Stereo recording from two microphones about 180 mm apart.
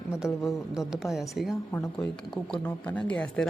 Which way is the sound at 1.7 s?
10° left (ahead or behind).